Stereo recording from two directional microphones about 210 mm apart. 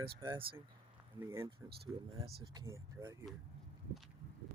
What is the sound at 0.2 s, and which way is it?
Speech, 20° right (ahead or behind).